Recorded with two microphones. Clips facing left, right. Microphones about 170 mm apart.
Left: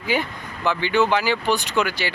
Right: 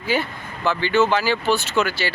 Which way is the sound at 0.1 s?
15° left (ahead or behind).